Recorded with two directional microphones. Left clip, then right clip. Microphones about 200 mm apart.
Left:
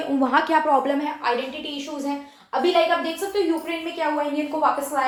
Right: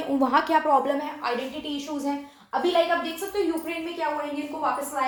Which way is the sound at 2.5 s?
30° right (ahead or behind).